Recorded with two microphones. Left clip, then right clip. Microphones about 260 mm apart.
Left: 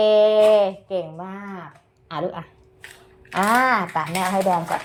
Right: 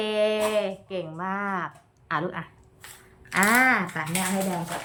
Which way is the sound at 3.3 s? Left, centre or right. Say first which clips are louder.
Left 2 dB; centre.